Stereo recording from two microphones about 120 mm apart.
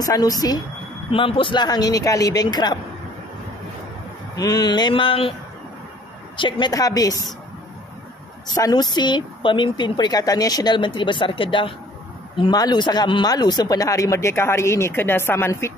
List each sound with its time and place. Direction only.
0.0 s a woman's voice: 30° left (ahead or behind)
1.1 s a woman's voice: 50° left (ahead or behind)
4.4 s a woman's voice: 35° left (ahead or behind)
6.3 s a woman's voice: 40° left (ahead or behind)
6.7 s a woman's voice: 30° left (ahead or behind)
8.5 s a woman's voice: 30° left (ahead or behind)